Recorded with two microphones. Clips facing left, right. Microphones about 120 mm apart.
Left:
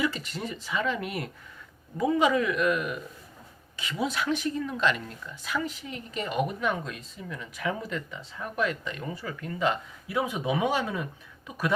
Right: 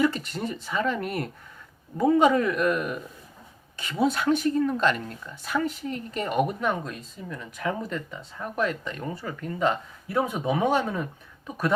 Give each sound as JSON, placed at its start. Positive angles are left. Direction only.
{"t": 0.0, "sound": "speech", "side_deg": -50}